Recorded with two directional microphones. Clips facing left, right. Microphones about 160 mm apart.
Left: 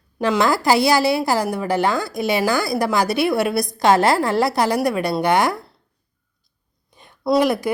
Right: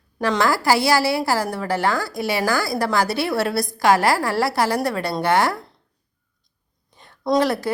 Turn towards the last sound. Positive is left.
turn(degrees=15)  # may be behind; listen again after turning